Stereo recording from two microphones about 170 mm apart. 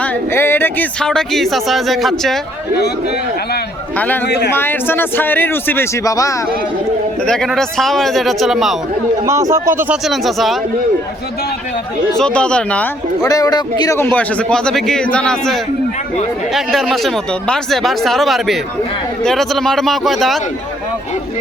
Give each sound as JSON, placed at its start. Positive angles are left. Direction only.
{"t": 0.0, "sound": "speech", "side_deg": 10}
{"t": 3.9, "sound": "a man's voice", "side_deg": 10}
{"t": 4.3, "sound": "speech", "side_deg": 80}
{"t": 4.5, "sound": "a man's voice", "side_deg": 10}
{"t": 7.3, "sound": "speech", "side_deg": 0}
{"t": 9.2, "sound": "speech", "side_deg": -15}
{"t": 9.9, "sound": "speech", "side_deg": 0}
{"t": 12.1, "sound": "speech", "side_deg": 5}
{"t": 13.2, "sound": "a man's voice", "side_deg": 20}